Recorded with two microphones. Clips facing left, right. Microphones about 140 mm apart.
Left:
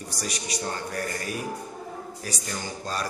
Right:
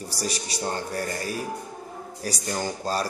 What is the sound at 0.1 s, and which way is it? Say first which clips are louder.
Speech: right 1 dB; 30° right (ahead or behind).